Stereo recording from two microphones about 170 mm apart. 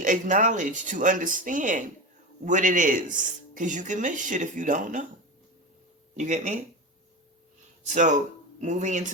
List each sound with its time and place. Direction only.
0.0 s speech: 50° right (ahead or behind)
6.1 s speech: 45° right (ahead or behind)
7.9 s speech: 45° right (ahead or behind)